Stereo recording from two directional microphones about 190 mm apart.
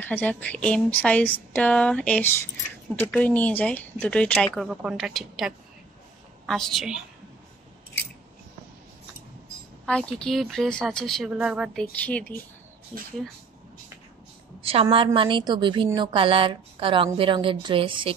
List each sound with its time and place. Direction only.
0.0 s speech: 10° left (ahead or behind)
9.8 s speech: 5° left (ahead or behind)
12.0 s speech: 5° left (ahead or behind)
14.6 s a woman's voice: 30° right (ahead or behind)